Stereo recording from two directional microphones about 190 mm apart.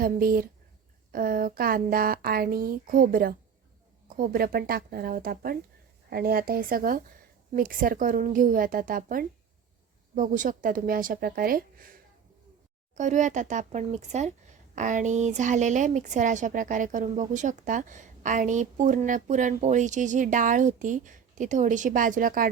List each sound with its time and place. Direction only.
0.0 s speech: 50° right (ahead or behind)
13.0 s speech: 40° right (ahead or behind)